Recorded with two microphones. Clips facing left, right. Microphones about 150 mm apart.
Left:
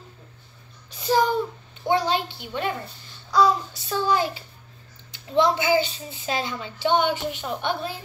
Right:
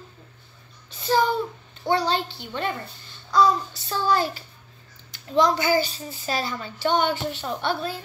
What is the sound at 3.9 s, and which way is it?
Speech, 15° left (ahead or behind).